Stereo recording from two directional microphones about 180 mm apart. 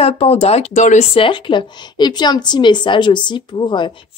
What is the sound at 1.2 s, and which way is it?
A woman's voice, 25° left (ahead or behind).